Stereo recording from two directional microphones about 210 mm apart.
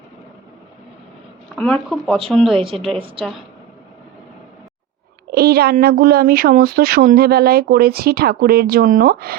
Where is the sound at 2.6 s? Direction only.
25° right (ahead or behind).